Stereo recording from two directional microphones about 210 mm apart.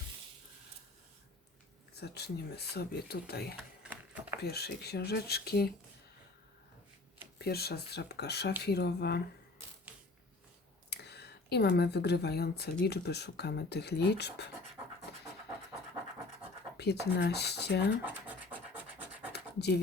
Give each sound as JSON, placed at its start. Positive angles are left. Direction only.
{"t": 2.0, "sound": "speech", "side_deg": 50}
{"t": 3.8, "sound": "a sound", "side_deg": -5}
{"t": 4.4, "sound": "speech", "side_deg": 50}
{"t": 7.3, "sound": "speech", "side_deg": 50}
{"t": 10.8, "sound": "speech", "side_deg": 50}
{"t": 15.1, "sound": "pant", "side_deg": 50}
{"t": 16.7, "sound": "speech", "side_deg": 50}
{"t": 18.0, "sound": "scratch", "side_deg": -5}
{"t": 19.3, "sound": "scratch", "side_deg": 50}